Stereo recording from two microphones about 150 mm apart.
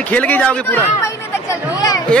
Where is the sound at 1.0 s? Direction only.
20° left (ahead or behind).